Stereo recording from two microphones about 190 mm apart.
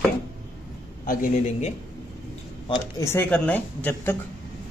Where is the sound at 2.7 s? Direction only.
15° left (ahead or behind).